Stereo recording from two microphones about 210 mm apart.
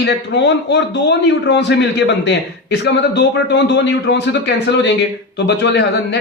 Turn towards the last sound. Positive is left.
turn(degrees=55)  # may be behind; listen again after turning